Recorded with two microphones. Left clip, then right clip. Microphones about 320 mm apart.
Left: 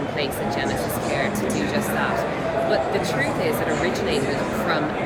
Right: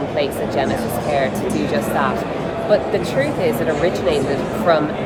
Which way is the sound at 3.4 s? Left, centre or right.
Centre.